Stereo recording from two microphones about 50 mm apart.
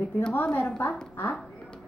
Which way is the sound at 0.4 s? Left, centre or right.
Left.